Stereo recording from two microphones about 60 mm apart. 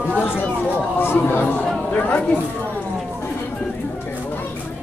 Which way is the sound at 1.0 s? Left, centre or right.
Left.